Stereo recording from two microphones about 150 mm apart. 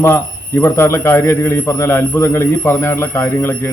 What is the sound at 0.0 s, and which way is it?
A man's voice, 15° left (ahead or behind).